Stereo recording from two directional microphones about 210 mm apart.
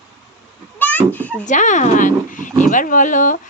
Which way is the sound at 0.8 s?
10° left (ahead or behind).